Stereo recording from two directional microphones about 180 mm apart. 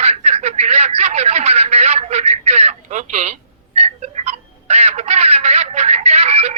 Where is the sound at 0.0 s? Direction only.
35° right (ahead or behind).